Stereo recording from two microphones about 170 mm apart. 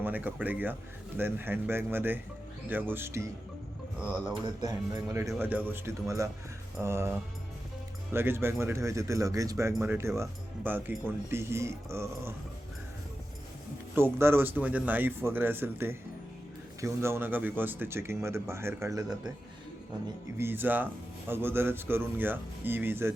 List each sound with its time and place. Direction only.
0.0 s speech: 10° right (ahead or behind)
4.6 s a man's voice: 20° right (ahead or behind)
8.1 s speech: 15° right (ahead or behind)
13.9 s speech: 15° right (ahead or behind)
20.4 s speech: 10° right (ahead or behind)